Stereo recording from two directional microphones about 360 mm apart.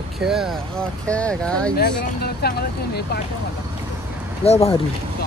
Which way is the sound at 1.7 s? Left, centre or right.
Left.